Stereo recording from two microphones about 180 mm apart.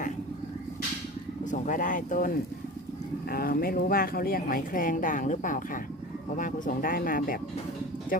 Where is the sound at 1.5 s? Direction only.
45° left (ahead or behind).